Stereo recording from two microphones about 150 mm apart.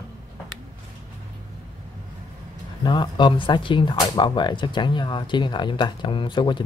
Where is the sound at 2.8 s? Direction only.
30° left (ahead or behind).